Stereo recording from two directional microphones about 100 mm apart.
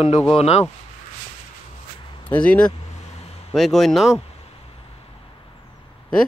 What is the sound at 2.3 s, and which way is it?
Speech, 10° left (ahead or behind).